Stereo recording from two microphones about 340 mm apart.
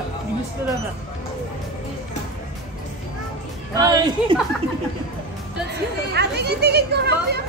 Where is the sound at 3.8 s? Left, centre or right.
Centre.